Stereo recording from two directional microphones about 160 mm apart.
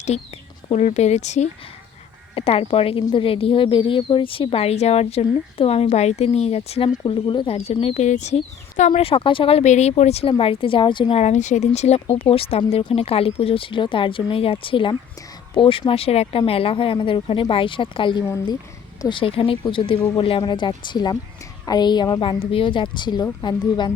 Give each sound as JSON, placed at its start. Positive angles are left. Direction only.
{"t": 0.1, "sound": "speech", "side_deg": 45}